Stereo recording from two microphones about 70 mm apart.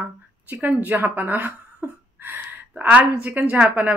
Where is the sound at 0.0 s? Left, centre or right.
Right.